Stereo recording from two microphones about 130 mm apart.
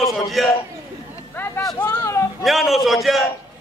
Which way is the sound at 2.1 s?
25° left (ahead or behind).